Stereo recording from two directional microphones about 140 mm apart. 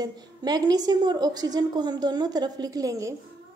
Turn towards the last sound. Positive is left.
turn(degrees=-25)  # may be behind; listen again after turning